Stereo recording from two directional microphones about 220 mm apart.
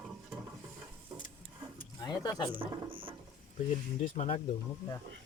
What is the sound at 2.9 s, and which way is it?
Mechanisms, 25° right (ahead or behind).